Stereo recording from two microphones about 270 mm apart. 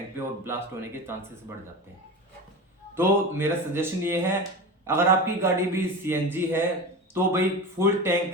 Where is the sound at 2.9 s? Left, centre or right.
Centre.